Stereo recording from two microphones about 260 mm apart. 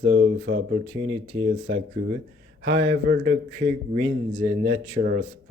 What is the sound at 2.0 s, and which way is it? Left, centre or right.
Speech, right.